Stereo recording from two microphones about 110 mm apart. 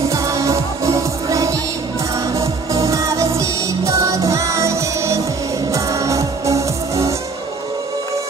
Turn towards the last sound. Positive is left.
turn(degrees=-30)  # may be behind; listen again after turning